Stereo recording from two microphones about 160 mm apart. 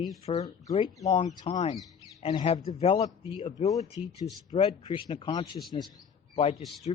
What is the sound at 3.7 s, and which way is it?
A man's voice, 20° left (ahead or behind).